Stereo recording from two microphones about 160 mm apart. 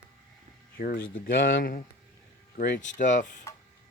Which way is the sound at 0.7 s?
65° left (ahead or behind).